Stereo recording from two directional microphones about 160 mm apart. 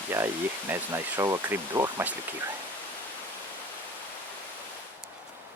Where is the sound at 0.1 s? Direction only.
15° right (ahead or behind).